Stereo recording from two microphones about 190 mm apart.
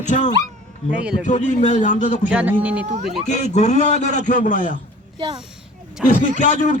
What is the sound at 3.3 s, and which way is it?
A man's voice, 40° left (ahead or behind).